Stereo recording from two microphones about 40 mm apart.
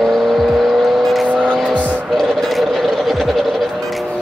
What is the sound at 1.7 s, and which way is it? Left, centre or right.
Vehicle, left.